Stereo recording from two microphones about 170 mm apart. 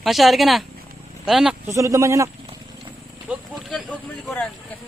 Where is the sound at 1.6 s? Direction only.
20° right (ahead or behind).